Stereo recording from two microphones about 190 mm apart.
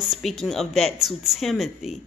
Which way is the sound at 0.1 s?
Centre (ahead or behind).